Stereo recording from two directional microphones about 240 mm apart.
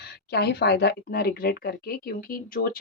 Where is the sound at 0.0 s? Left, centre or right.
Left.